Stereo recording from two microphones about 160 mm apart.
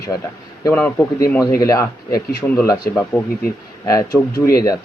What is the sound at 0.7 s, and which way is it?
Speech, 10° left (ahead or behind).